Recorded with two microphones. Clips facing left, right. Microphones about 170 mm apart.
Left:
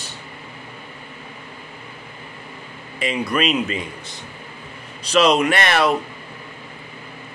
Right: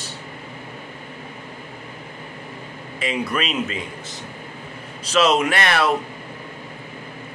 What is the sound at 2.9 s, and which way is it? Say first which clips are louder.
Speech: left 2 dB; centre (ahead or behind).